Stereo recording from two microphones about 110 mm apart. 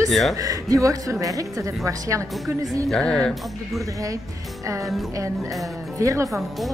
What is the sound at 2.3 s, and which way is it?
A man's voice, centre (ahead or behind).